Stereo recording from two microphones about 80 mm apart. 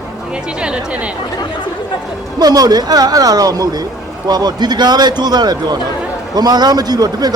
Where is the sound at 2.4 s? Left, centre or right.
Right.